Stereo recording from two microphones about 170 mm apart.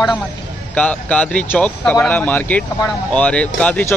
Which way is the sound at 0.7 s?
5° left (ahead or behind).